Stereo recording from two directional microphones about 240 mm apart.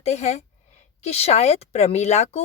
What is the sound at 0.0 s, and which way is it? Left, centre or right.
A woman's voice, left.